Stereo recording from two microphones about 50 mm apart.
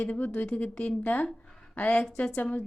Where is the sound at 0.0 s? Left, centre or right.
Left.